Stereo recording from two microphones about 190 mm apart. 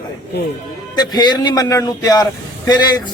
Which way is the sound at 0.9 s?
20° left (ahead or behind).